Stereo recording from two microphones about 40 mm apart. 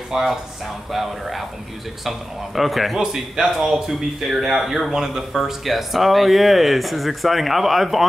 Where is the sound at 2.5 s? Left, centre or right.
Centre.